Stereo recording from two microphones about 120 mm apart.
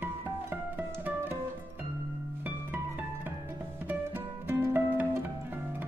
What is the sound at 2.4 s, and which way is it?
Music, 15° right (ahead or behind).